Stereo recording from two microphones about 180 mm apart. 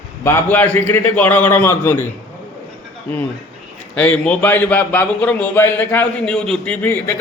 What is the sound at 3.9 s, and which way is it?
A man's voice, 5° left (ahead or behind).